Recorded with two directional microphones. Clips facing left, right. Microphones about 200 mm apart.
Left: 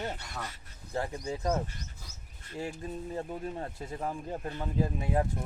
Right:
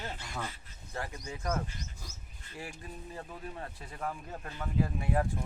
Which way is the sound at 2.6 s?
30° left (ahead or behind).